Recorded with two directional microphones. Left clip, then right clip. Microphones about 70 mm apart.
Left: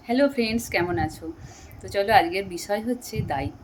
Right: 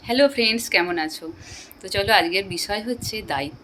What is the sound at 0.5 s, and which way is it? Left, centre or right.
Speech, left.